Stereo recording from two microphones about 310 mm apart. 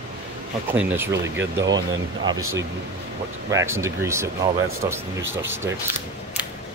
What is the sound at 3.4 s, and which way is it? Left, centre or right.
Speech, centre.